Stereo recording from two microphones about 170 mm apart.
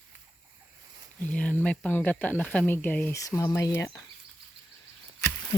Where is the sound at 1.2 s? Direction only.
10° left (ahead or behind).